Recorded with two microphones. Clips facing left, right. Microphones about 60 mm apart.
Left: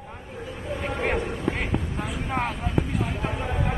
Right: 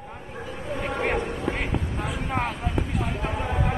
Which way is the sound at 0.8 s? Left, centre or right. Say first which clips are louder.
Right 1 dB; centre.